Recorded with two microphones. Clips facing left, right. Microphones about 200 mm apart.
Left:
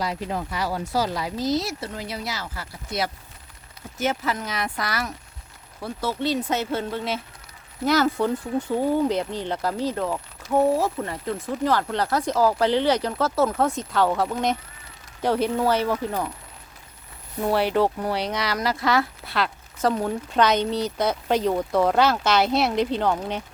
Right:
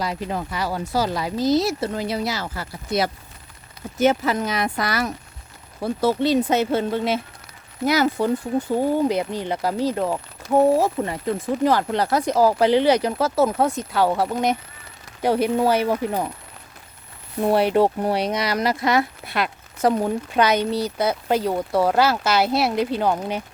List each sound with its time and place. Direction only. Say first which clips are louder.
0.0 s speech: right 1 dB; 60° right (ahead or behind)
1.5 s speech: right 7 dB; 30° right (ahead or behind)
5.8 s speech: right 8 dB; 40° right (ahead or behind)
6.2 s speech: right 3 dB; 15° right (ahead or behind)
17.4 s speech: right 3 dB; 20° right (ahead or behind)